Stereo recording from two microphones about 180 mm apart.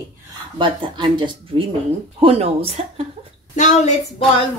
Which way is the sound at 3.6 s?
40° left (ahead or behind).